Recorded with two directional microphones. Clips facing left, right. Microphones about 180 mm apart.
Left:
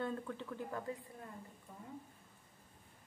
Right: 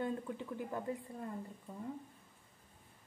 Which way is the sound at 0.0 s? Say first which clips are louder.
Right 2 dB; 15° right (ahead or behind).